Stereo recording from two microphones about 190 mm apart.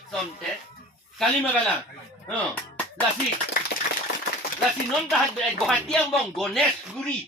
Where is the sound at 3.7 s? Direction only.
65° left (ahead or behind).